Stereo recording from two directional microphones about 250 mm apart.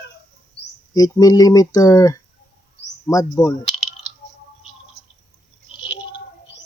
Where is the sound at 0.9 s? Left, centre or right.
Centre.